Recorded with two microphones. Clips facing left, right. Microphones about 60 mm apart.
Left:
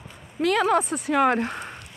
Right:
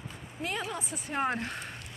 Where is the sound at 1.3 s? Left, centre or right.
Left.